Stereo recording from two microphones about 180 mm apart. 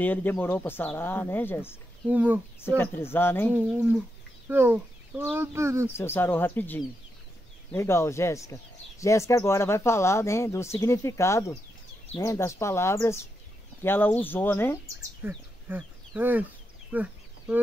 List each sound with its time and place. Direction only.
0.0 s speech: 10° left (ahead or behind)
2.0 s speech: 10° right (ahead or behind)
2.6 s speech: 15° left (ahead or behind)
3.5 s speech: 5° right (ahead or behind)
5.9 s speech: 15° left (ahead or behind)
15.2 s speech: 10° right (ahead or behind)
16.9 s a sound: 5° right (ahead or behind)